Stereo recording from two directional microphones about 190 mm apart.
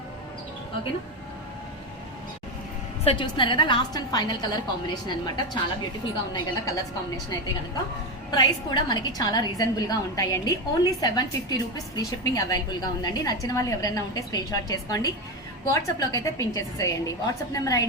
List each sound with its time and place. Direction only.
3.0 s a woman's voice: 30° left (ahead or behind)
6.3 s a woman's voice: 20° left (ahead or behind)
8.3 s a woman's voice: 20° left (ahead or behind)